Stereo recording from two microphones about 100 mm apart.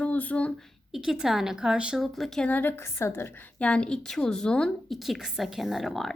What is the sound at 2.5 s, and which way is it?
Speech, 20° left (ahead or behind).